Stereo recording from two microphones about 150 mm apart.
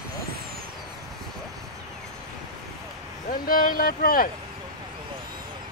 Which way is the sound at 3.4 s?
75° left (ahead or behind).